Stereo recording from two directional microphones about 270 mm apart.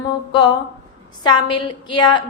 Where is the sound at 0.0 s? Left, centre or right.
Centre.